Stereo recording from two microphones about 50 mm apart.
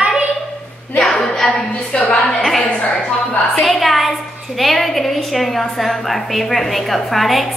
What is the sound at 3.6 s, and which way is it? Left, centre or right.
A woman's voice, centre.